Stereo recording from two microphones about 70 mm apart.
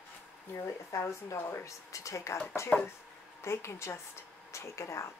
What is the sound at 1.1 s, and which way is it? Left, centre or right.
Speech, left.